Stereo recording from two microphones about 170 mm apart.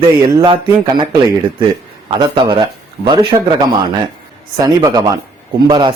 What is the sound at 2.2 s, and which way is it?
Speech, 25° right (ahead or behind).